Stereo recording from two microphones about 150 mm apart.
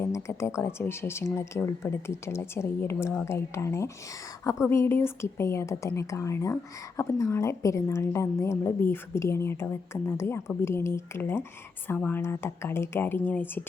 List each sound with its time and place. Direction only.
0.0 s speech: 20° left (ahead or behind)